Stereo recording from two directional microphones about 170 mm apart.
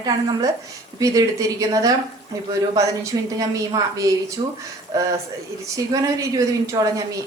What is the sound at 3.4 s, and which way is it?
A man's voice, 20° right (ahead or behind).